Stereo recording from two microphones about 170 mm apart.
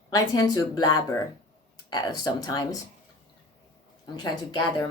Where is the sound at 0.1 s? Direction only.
20° left (ahead or behind).